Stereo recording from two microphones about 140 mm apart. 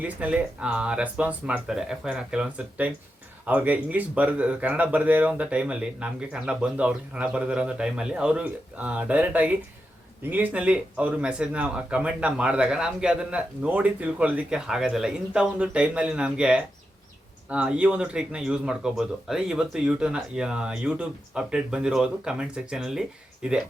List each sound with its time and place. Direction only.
0.0 s speech: 10° right (ahead or behind)